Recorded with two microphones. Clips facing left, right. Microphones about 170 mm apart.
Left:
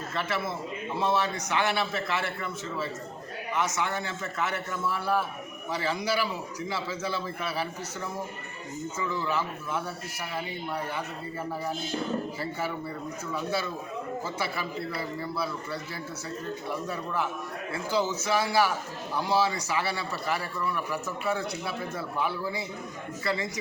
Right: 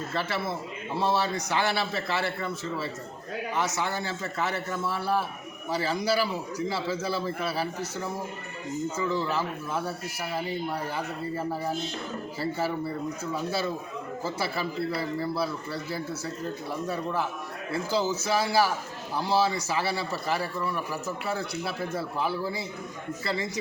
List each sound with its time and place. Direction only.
0.1 s a man's voice: 35° right (ahead or behind)
9.0 s a man's voice: 35° right (ahead or behind)
12.4 s a man's voice: 30° right (ahead or behind)